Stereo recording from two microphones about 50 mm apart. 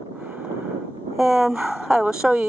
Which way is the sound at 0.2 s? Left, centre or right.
Right.